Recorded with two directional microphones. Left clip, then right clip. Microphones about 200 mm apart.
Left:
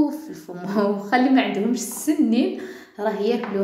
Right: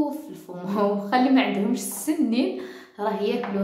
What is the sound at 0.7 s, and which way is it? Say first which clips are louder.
A woman's voice: left 2 dB; 5° left (ahead or behind).